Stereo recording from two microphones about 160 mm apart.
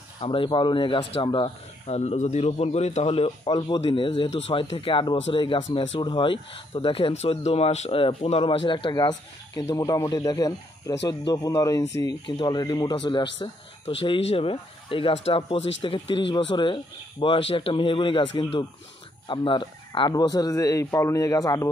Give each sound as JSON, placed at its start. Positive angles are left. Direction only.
{"t": 0.2, "sound": "speech", "side_deg": 35}